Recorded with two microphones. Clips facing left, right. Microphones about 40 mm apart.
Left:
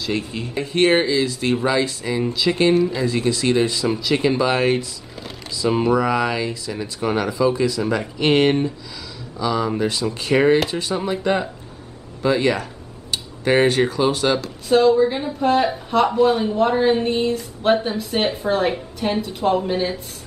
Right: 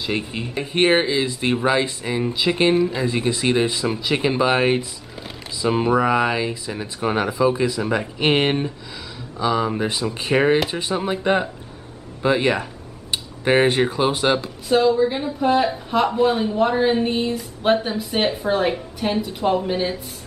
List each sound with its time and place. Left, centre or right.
0.0 s speech: right
14.7 s speech: centre